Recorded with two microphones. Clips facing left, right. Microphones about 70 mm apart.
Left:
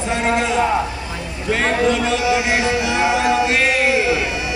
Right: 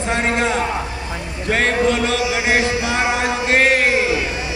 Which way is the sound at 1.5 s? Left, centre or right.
Right.